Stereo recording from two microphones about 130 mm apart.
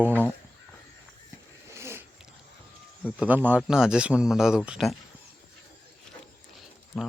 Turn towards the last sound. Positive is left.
turn(degrees=0)  # may be behind; listen again after turning